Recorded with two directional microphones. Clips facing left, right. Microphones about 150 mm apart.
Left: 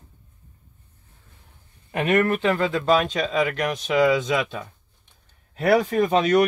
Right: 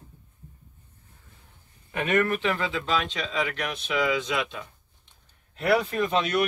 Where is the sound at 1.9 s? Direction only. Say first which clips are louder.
Left 4 dB; 40° left (ahead or behind).